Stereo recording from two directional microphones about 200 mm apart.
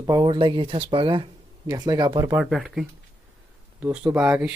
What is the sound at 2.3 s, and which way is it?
Speech, 5° right (ahead or behind).